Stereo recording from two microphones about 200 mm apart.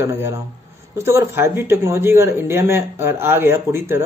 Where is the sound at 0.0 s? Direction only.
15° right (ahead or behind).